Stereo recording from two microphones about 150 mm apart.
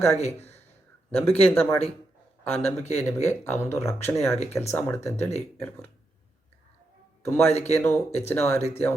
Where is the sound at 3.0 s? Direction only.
15° left (ahead or behind).